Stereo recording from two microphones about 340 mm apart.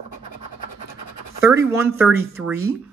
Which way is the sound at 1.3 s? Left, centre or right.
Centre.